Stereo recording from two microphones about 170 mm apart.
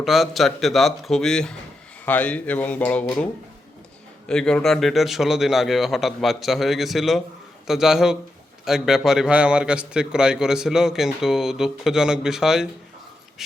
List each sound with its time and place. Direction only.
0.0 s a man's voice: centre (ahead or behind)
4.3 s a man's voice: 5° left (ahead or behind)